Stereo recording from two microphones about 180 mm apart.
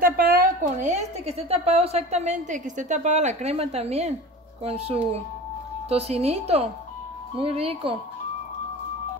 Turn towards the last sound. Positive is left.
turn(degrees=-35)  # may be behind; listen again after turning